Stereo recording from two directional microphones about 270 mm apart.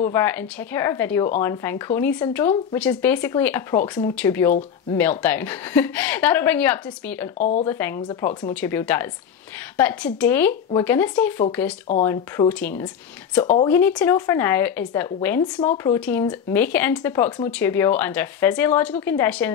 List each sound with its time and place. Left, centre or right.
0.0 s speech: centre
7.3 s speech: left
7.6 s speech: centre